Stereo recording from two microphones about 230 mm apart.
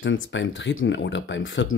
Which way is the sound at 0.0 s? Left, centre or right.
Left.